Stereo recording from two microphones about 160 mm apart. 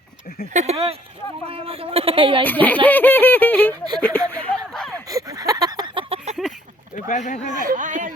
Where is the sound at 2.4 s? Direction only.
10° left (ahead or behind).